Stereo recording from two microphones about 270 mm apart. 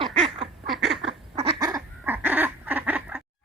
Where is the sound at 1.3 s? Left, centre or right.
Centre.